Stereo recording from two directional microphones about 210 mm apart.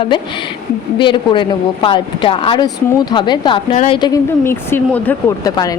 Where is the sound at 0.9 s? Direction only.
25° left (ahead or behind).